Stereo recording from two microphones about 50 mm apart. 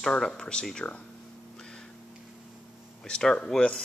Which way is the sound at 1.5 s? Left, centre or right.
Centre.